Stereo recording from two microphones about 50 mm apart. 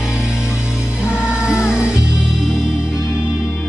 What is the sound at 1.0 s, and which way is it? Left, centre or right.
Music, centre.